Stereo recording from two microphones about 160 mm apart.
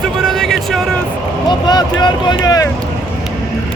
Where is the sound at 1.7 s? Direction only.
25° left (ahead or behind).